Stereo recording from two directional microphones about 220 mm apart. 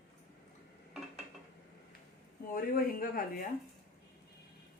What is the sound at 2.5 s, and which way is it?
Speech, 40° left (ahead or behind).